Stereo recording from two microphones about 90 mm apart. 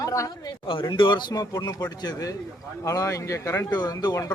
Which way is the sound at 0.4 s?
65° left (ahead or behind).